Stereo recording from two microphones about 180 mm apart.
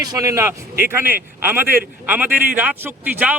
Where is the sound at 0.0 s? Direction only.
20° right (ahead or behind).